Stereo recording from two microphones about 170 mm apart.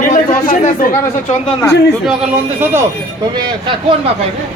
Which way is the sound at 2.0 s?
10° right (ahead or behind).